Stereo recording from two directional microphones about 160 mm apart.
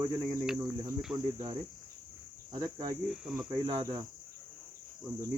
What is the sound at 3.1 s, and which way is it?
Cricket, 5° right (ahead or behind).